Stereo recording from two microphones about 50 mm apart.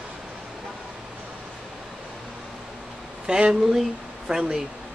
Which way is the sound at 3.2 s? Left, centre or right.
Centre.